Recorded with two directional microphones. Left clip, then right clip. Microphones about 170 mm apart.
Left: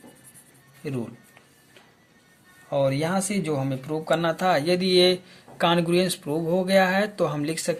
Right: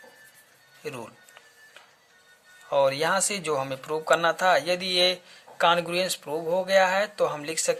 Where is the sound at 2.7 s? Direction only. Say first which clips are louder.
Right 1 dB; 30° right (ahead or behind).